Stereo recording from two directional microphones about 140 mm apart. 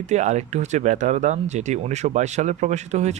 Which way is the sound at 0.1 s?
55° right (ahead or behind).